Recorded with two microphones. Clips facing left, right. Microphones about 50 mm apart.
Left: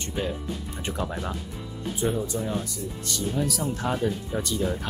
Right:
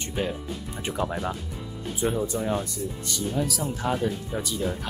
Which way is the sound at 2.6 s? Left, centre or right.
Centre.